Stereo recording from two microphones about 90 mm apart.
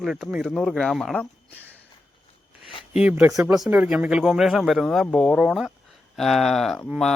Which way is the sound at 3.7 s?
15° right (ahead or behind).